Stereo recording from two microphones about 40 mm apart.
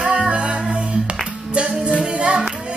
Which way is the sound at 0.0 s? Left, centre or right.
Right.